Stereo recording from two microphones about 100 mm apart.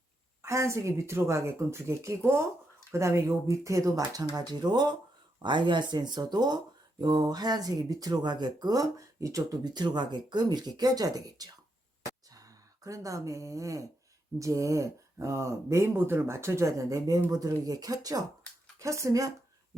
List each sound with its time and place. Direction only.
0.4 s speech: 30° right (ahead or behind)